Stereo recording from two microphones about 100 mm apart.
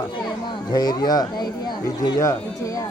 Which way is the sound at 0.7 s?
40° left (ahead or behind).